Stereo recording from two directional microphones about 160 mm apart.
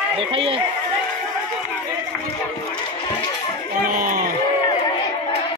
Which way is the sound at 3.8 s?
60° right (ahead or behind).